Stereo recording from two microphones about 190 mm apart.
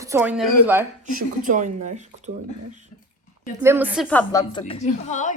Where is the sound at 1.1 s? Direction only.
45° right (ahead or behind).